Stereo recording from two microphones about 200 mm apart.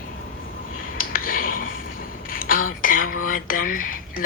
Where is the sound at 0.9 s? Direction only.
45° left (ahead or behind).